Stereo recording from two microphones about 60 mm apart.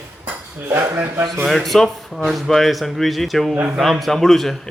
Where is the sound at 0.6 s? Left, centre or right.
Right.